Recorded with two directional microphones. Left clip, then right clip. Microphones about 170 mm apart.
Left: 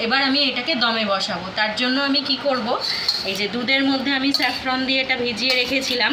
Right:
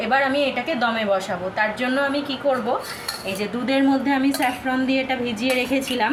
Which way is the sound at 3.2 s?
25° right (ahead or behind).